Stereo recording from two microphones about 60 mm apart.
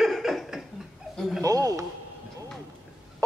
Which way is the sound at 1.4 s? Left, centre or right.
Right.